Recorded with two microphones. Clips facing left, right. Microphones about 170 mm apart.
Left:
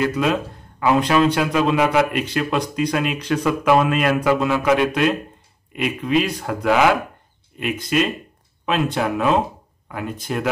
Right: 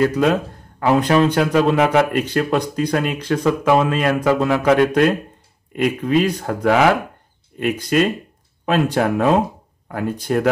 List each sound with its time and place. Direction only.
0.0 s speech: 35° right (ahead or behind)